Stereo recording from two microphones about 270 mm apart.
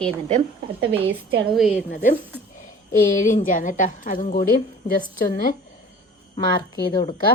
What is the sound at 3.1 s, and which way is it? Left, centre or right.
A woman's voice, left.